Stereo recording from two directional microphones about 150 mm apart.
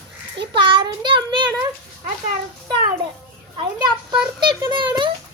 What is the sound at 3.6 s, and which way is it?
A child's voice, 30° right (ahead or behind).